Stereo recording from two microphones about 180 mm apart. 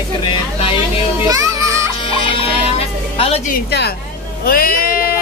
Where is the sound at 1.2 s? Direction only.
20° right (ahead or behind).